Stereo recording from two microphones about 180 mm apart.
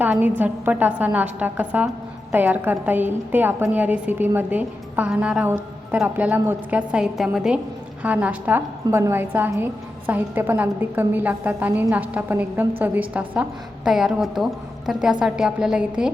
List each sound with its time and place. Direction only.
0.0 s a woman's voice: 10° right (ahead or behind)